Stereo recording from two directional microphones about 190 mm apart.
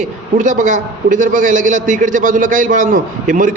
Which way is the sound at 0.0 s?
40° right (ahead or behind).